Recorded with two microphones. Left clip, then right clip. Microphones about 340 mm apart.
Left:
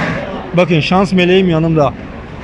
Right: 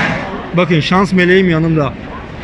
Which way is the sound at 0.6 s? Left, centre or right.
Centre.